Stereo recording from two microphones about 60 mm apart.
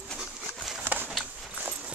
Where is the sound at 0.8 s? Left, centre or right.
Right.